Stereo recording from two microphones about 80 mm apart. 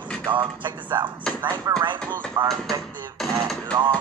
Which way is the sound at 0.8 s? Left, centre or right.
Right.